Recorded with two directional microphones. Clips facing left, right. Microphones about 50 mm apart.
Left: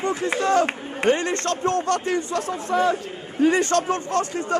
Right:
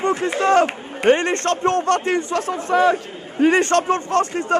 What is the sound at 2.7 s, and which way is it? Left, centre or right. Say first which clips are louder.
Speech: right 5 dB; right.